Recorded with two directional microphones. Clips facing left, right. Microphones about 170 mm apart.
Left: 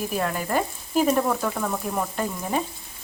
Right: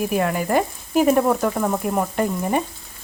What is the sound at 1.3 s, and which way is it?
Speech, 20° right (ahead or behind).